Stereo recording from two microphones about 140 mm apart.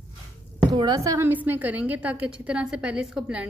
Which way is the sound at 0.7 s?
30° right (ahead or behind).